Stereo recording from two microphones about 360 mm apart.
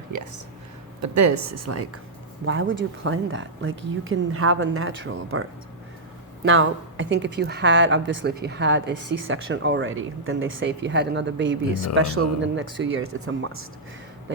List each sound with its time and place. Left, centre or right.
0.1 s a woman's voice: right